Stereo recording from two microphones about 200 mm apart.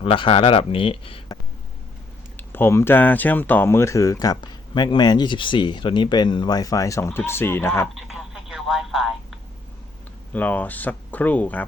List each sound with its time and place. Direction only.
0.0 s speech: 25° left (ahead or behind)
2.3 s speech: 10° left (ahead or behind)
7.9 s telephone: centre (ahead or behind)
10.3 s speech: 10° left (ahead or behind)